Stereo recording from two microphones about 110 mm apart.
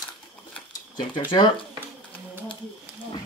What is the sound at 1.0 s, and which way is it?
Speech, 50° left (ahead or behind).